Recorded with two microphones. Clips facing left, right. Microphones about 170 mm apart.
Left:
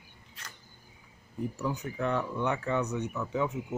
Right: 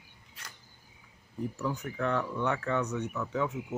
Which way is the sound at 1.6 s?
15° left (ahead or behind).